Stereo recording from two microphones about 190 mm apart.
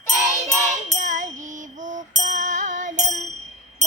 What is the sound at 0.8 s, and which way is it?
Music, 40° right (ahead or behind).